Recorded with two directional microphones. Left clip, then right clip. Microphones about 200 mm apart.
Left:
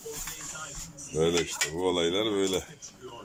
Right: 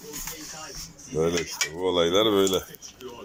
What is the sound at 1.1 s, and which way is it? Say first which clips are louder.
Cutlery: right 1 dB; centre (ahead or behind).